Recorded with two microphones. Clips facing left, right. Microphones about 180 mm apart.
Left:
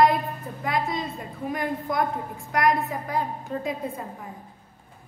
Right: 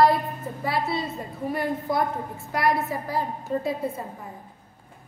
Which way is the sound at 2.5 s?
5° right (ahead or behind).